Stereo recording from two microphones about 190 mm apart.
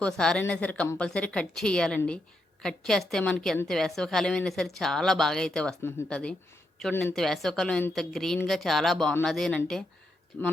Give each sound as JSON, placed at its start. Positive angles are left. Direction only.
{"t": 0.0, "sound": "speech", "side_deg": 5}